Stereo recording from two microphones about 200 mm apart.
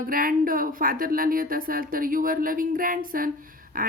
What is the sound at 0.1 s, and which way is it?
A woman's voice, 45° right (ahead or behind).